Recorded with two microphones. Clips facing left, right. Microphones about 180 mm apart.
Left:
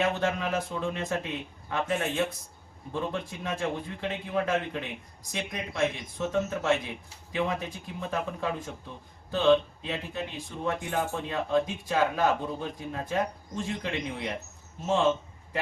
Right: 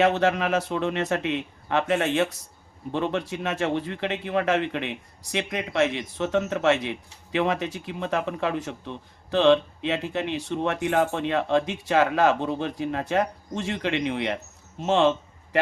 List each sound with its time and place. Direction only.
0.0 s speech: 80° right